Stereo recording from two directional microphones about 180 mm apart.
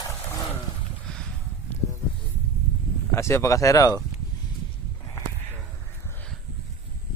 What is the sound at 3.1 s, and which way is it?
Speech, 15° left (ahead or behind).